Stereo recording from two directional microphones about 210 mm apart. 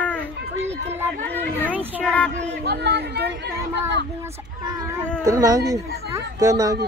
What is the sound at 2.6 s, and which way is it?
Speech, 50° right (ahead or behind).